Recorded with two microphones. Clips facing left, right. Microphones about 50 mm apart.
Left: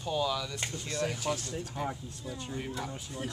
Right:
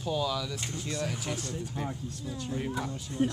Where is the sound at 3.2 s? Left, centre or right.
Centre.